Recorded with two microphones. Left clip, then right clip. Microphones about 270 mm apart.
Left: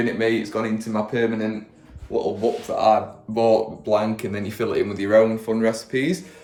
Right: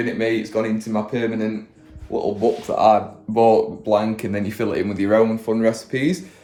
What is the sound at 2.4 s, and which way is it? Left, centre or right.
Speech, centre.